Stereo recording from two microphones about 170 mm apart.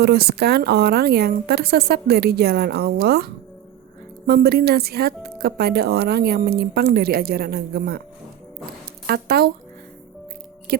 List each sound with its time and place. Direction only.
0.0 s speech: 70° right (ahead or behind)
9.0 s speech: 65° right (ahead or behind)
10.7 s music: 65° right (ahead or behind)